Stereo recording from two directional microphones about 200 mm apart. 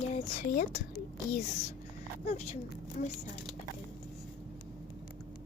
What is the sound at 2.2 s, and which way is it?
Speech, 35° left (ahead or behind).